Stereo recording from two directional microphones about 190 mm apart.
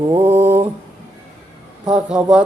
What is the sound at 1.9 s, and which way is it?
Mantra, 5° right (ahead or behind).